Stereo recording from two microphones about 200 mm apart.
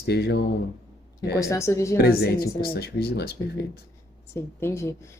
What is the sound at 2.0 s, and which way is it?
Speech, 50° left (ahead or behind).